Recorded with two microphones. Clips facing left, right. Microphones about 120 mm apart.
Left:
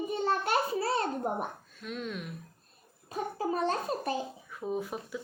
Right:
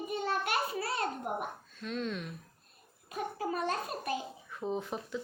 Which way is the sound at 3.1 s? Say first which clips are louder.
Left 3 dB; 30° left (ahead or behind).